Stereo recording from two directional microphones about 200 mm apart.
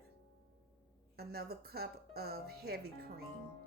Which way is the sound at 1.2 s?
50° right (ahead or behind).